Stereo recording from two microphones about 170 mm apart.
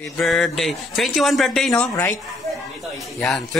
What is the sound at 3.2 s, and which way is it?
Speech, centre (ahead or behind).